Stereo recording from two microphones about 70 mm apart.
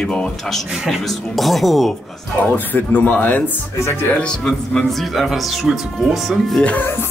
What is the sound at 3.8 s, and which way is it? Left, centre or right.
Music, left.